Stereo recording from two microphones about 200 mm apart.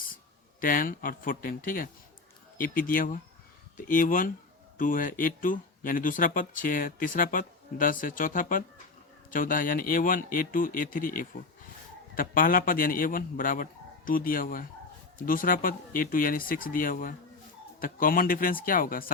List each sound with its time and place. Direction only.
0.6 s speech: 45° left (ahead or behind)